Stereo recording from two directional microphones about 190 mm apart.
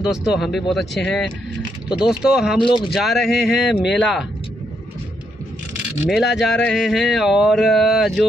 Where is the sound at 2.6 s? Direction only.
25° left (ahead or behind).